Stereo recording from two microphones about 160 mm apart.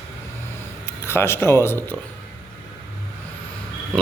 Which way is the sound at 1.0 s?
15° left (ahead or behind).